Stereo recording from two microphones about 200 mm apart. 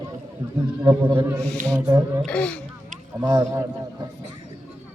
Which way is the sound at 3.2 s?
20° right (ahead or behind).